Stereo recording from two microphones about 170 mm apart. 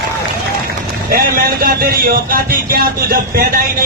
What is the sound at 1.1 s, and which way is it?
A man's voice, 60° right (ahead or behind).